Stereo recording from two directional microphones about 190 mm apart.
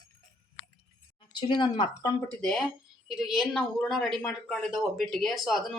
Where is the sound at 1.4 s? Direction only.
25° left (ahead or behind).